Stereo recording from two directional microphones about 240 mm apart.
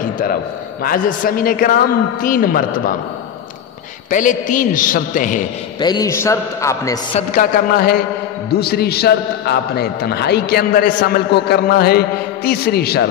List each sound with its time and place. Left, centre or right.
0.8 s a man's voice: left
4.1 s a man's voice: left
5.8 s a man's voice: centre
7.2 s a man's voice: left